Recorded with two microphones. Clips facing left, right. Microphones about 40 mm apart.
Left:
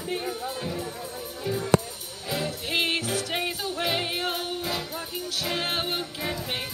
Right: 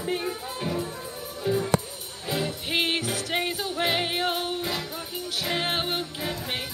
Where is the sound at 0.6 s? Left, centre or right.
Right.